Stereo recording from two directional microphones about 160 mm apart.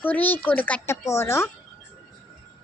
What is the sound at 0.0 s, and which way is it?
Speech, 10° left (ahead or behind).